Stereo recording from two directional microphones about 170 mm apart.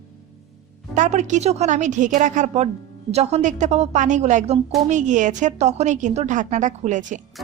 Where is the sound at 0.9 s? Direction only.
45° right (ahead or behind).